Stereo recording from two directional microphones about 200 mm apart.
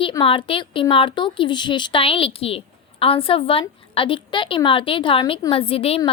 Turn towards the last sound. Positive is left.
turn(degrees=30)  # may be behind; listen again after turning